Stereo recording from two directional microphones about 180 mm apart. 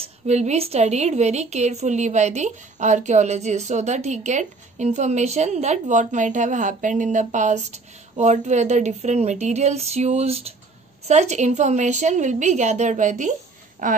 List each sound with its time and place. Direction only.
0.0 s a woman's voice: 35° right (ahead or behind)